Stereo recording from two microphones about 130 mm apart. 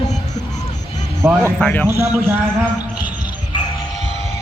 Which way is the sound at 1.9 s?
20° right (ahead or behind).